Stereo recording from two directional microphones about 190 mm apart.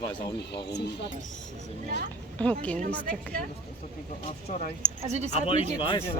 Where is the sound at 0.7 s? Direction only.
60° left (ahead or behind).